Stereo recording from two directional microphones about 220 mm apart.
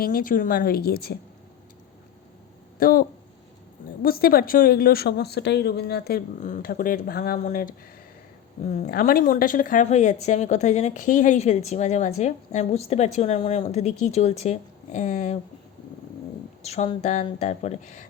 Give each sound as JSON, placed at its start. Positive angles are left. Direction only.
{"t": 0.0, "sound": "speech", "side_deg": 40}
{"t": 2.7, "sound": "speech", "side_deg": 40}
{"t": 8.7, "sound": "speech", "side_deg": 35}
{"t": 16.6, "sound": "speech", "side_deg": 30}